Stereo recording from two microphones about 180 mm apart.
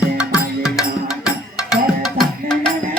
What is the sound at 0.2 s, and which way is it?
Music, 5° right (ahead or behind).